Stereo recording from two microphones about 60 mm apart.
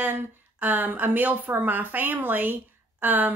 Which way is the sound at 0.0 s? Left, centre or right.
Right.